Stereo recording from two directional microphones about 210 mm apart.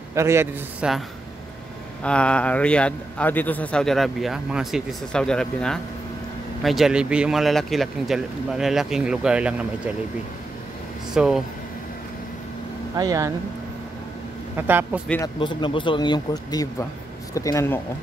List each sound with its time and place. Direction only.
0.1 s a man's voice: 15° right (ahead or behind)
2.0 s a man's voice: 5° left (ahead or behind)
11.1 s a man's voice: centre (ahead or behind)
12.9 s a man's voice: 15° right (ahead or behind)
14.7 s a man's voice: 10° right (ahead or behind)
15.0 s speech: 10° left (ahead or behind)
15.3 s speech: 25° left (ahead or behind)